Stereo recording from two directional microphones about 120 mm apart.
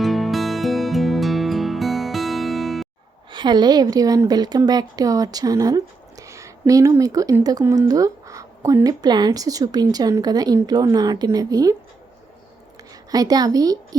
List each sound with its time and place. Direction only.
0.0 s music: centre (ahead or behind)
3.3 s a woman's voice: 35° right (ahead or behind)
13.1 s a woman's voice: 30° right (ahead or behind)